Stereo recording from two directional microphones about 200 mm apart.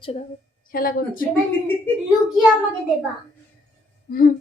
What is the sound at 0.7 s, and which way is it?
Speech, 45° left (ahead or behind).